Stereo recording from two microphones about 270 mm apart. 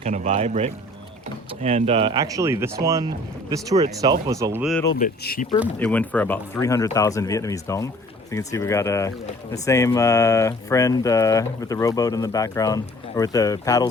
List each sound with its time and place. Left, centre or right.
0.0 s speech: right; by 4.8 s centre
4.9 s speech: left
5.5 s speech: centre